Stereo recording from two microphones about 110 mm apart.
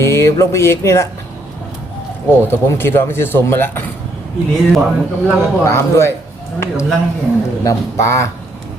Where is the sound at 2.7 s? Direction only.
20° left (ahead or behind).